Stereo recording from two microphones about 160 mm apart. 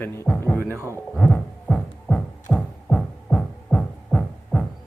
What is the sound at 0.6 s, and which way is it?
Speech, 15° right (ahead or behind).